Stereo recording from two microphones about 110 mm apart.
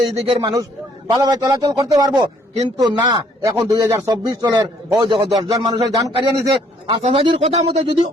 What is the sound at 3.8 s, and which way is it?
Speech, 25° right (ahead or behind).